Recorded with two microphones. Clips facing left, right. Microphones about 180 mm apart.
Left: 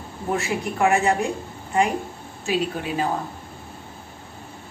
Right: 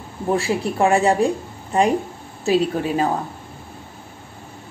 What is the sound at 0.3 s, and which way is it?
A woman's voice, 30° right (ahead or behind).